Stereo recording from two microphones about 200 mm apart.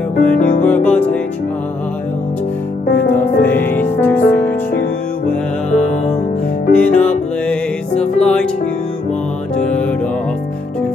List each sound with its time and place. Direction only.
0.4 s music: 40° left (ahead or behind)
0.7 s music: 10° left (ahead or behind)
3.2 s music: 10° left (ahead or behind)
6.7 s music: 5° left (ahead or behind)
9.6 s music: 5° left (ahead or behind)